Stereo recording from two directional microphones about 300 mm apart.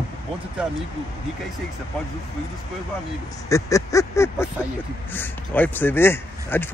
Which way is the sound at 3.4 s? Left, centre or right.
Centre.